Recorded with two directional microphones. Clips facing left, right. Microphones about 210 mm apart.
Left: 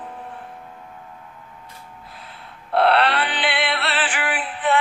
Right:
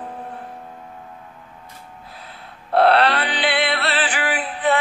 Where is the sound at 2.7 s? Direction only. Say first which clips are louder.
Right 2 dB; 40° right (ahead or behind).